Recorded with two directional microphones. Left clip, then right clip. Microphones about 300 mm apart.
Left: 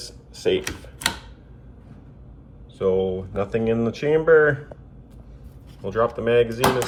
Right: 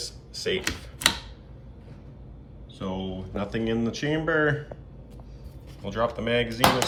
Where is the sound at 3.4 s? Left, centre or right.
Centre.